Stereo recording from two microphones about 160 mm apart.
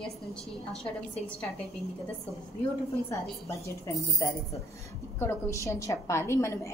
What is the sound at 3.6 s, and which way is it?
A woman's voice, 20° left (ahead or behind).